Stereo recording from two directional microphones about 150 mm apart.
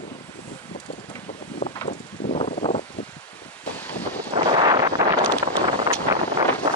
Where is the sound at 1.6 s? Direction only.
45° left (ahead or behind).